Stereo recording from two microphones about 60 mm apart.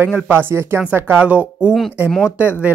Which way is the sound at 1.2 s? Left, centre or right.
Right.